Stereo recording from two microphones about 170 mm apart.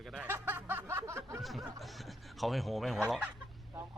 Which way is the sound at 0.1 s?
10° right (ahead or behind).